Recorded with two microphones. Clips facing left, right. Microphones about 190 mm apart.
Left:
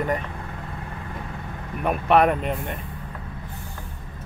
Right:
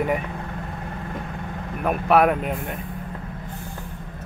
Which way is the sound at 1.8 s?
5° right (ahead or behind).